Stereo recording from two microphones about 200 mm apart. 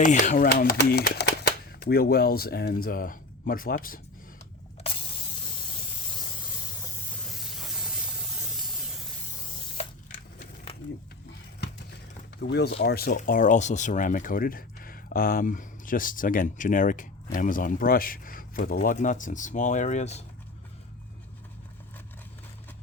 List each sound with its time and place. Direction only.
0.0 s speech: 40° left (ahead or behind)
7.3 s hiss: centre (ahead or behind)
12.4 s speech: 55° left (ahead or behind); by 20.2 s 35° left (ahead or behind)